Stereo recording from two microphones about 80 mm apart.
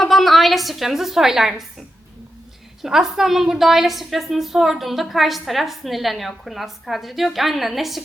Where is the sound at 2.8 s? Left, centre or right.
Centre.